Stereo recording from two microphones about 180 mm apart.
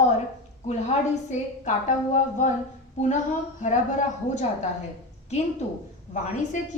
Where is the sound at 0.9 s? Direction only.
40° left (ahead or behind).